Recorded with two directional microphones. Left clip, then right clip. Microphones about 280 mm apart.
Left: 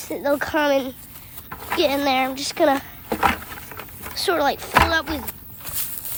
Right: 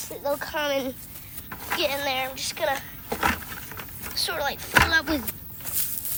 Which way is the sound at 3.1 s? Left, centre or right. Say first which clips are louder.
Left 5 dB; left.